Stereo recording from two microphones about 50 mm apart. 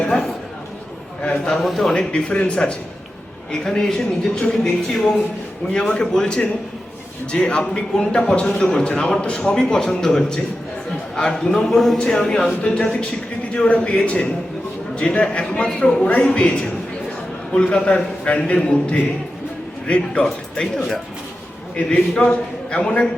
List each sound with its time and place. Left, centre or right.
0.1 s speech: centre
1.2 s a man's voice: left
1.5 s speech: centre
1.9 s a man's voice: centre
17.9 s a man's voice: left
20.2 s speech: centre
21.8 s a man's voice: centre